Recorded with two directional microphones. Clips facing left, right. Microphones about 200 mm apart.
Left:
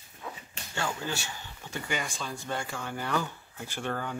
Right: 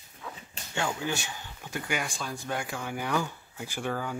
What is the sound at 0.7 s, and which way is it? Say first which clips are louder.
Speech: right 2 dB; 15° right (ahead or behind).